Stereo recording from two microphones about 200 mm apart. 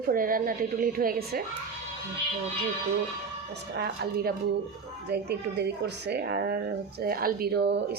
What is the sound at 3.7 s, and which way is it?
Speech, 55° right (ahead or behind).